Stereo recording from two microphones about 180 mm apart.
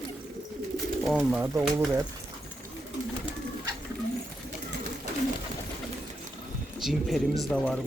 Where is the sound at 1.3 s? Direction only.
10° right (ahead or behind).